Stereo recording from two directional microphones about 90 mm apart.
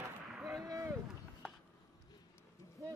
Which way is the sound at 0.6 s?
40° right (ahead or behind).